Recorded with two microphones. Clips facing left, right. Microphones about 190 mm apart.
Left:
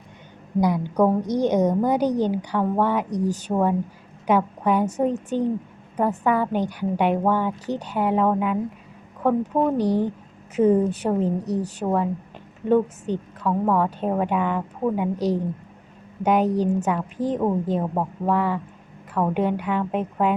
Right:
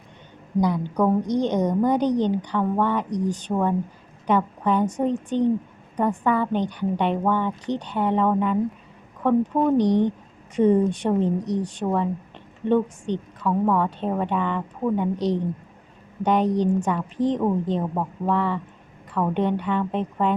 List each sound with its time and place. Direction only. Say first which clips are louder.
0.6 s a woman's voice: left 2 dB; 10° left (ahead or behind)